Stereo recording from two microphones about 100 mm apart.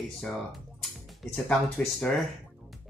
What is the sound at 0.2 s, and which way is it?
Speech, centre (ahead or behind).